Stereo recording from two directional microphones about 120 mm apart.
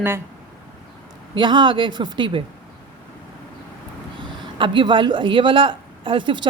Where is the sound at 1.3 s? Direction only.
40° right (ahead or behind).